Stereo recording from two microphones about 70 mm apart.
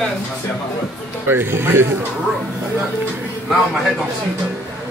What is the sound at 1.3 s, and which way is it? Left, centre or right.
Speech, right.